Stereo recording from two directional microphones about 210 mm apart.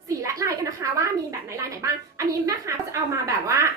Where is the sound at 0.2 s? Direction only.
15° right (ahead or behind).